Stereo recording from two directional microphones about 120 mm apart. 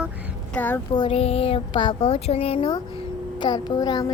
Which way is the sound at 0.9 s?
50° left (ahead or behind).